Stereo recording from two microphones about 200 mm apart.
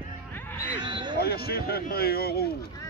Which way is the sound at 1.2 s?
50° left (ahead or behind).